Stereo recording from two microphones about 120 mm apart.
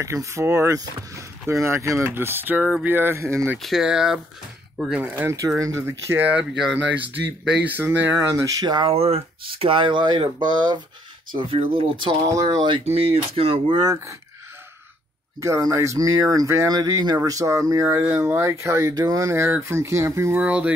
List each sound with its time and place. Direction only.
0.0 s speech: 25° right (ahead or behind)
3.5 s speech: centre (ahead or behind)
5.6 s speech: 25° right (ahead or behind)
8.8 s speech: 55° right (ahead or behind); by 10.8 s 35° right (ahead or behind)
11.3 s speech: 50° right (ahead or behind)
12.3 s speech: 35° right (ahead or behind)
12.8 s speech: 55° right (ahead or behind)
13.7 s speech: 30° right (ahead or behind)
15.4 s speech: 25° right (ahead or behind)
20.4 s speech: 10° right (ahead or behind)